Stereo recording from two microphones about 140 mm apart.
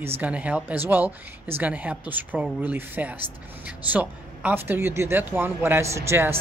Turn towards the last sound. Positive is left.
turn(degrees=-20)  # may be behind; listen again after turning